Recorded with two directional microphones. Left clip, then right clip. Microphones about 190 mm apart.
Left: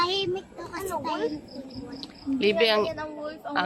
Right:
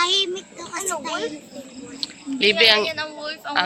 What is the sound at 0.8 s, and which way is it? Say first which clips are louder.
Speech: right 3 dB; 20° right (ahead or behind).